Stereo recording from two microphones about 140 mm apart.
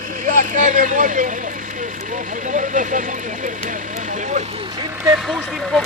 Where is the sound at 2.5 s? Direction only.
70° right (ahead or behind).